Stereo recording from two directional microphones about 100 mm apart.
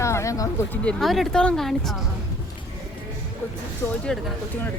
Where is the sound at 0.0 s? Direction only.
30° left (ahead or behind).